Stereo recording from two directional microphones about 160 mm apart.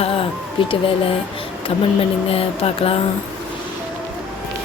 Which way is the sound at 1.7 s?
35° left (ahead or behind).